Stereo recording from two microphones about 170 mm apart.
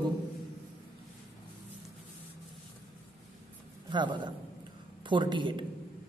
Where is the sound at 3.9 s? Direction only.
25° right (ahead or behind).